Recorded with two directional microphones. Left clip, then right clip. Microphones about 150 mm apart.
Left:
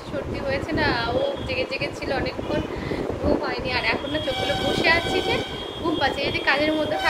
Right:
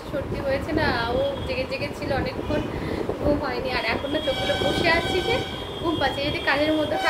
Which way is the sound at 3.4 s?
5° left (ahead or behind).